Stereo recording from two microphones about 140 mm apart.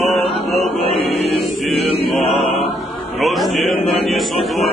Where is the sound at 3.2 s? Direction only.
Centre (ahead or behind).